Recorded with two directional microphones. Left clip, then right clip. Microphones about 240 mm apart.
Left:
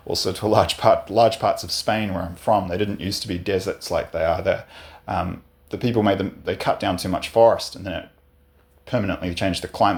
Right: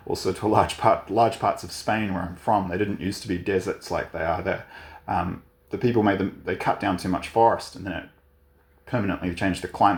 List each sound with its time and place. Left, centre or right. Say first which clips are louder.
0.1 s speech: left 3 dB; left